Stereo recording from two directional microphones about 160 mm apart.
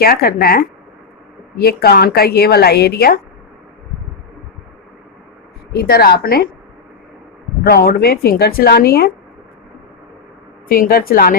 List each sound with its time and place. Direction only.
0.0 s a woman's voice: 70° left (ahead or behind)
5.7 s speech: 75° left (ahead or behind)
7.6 s speech: 75° left (ahead or behind)
10.7 s speech: 70° left (ahead or behind)